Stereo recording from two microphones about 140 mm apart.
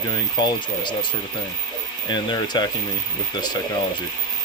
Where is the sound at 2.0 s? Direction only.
30° left (ahead or behind).